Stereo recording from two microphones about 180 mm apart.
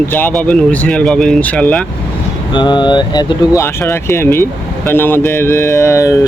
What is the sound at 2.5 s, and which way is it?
Speech, 25° left (ahead or behind).